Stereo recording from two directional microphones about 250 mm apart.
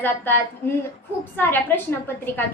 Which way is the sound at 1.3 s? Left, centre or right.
Centre.